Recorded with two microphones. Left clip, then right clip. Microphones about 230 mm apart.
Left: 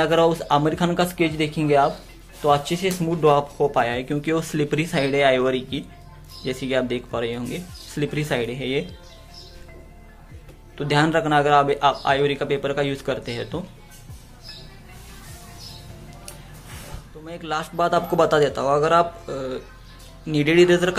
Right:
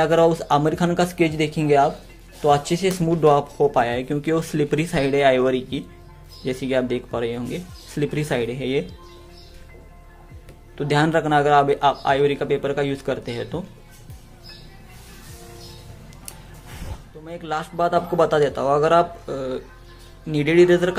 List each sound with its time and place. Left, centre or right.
0.0 s speech: centre
10.8 s speech: centre
17.2 s speech: centre